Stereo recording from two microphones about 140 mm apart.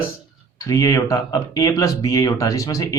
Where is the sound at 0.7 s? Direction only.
25° left (ahead or behind).